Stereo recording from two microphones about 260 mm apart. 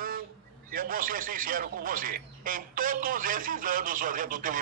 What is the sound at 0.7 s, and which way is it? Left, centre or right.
Speech, right.